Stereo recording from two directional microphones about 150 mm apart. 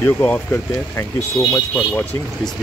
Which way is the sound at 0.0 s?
15° left (ahead or behind).